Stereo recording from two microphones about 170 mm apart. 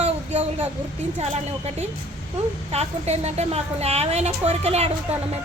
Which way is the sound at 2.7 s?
40° right (ahead or behind).